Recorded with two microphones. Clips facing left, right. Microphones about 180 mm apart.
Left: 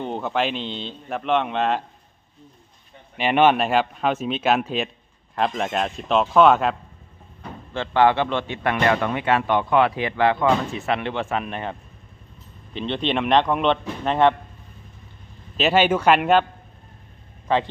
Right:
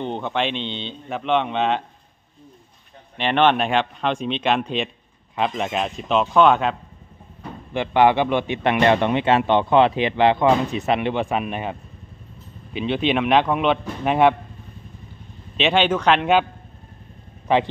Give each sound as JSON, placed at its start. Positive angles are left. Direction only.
{"t": 0.0, "sound": "speech", "side_deg": 5}
{"t": 3.2, "sound": "speech", "side_deg": 5}
{"t": 7.7, "sound": "a man's voice", "side_deg": -15}
{"t": 12.7, "sound": "speech", "side_deg": -5}
{"t": 15.5, "sound": "speech", "side_deg": 5}